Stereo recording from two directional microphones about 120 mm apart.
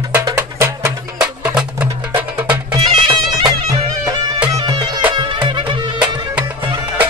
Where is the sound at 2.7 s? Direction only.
35° right (ahead or behind).